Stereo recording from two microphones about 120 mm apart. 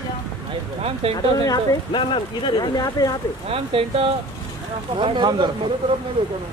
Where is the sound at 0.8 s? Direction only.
55° right (ahead or behind).